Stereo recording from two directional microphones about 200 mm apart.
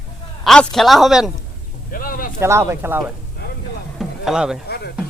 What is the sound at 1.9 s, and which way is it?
Speech, 45° left (ahead or behind).